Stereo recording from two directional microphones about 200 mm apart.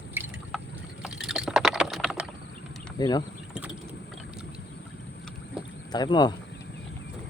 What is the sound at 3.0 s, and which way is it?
Speech, 20° left (ahead or behind).